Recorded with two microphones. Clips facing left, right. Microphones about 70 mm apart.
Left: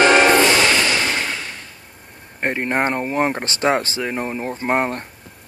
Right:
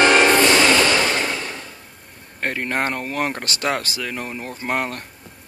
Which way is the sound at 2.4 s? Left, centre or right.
Left.